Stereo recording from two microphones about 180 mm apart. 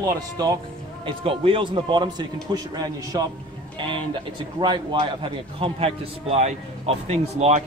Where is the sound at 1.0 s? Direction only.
30° right (ahead or behind).